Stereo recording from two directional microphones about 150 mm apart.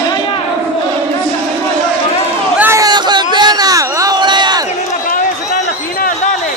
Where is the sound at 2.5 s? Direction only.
15° right (ahead or behind).